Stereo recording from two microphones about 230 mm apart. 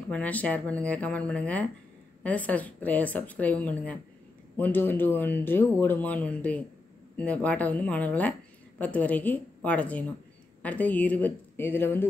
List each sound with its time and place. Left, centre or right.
0.1 s speech: centre